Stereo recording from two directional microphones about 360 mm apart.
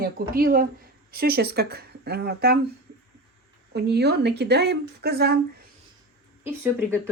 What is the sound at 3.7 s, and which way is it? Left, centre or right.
A woman's voice, right.